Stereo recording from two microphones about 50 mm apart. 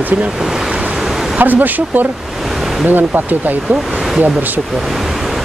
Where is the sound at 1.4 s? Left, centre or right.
Right.